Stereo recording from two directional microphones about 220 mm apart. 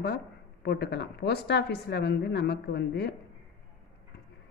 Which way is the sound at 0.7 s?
50° left (ahead or behind).